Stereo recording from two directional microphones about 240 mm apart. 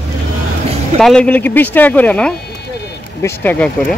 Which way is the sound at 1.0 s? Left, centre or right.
Centre.